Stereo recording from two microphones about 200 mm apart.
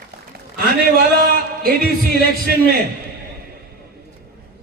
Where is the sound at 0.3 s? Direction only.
45° right (ahead or behind).